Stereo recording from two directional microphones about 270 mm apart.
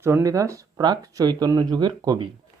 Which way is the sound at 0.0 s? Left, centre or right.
Centre.